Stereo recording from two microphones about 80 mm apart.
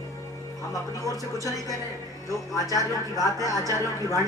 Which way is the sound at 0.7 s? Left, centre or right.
Left.